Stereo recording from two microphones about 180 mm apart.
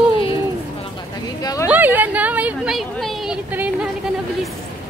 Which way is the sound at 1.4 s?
20° left (ahead or behind).